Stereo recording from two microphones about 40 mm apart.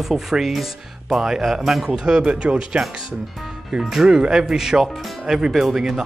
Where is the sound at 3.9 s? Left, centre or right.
Centre.